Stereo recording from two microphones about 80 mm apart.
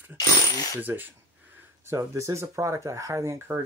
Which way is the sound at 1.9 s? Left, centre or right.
Right.